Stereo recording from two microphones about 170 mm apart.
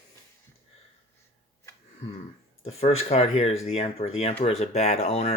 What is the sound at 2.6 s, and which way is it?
Speech, 35° left (ahead or behind).